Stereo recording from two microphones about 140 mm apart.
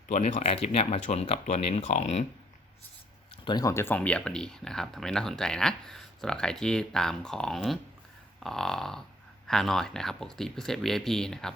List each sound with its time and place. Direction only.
0.1 s speech: 50° left (ahead or behind)
3.4 s speech: 30° left (ahead or behind); by 11.5 s 5° left (ahead or behind)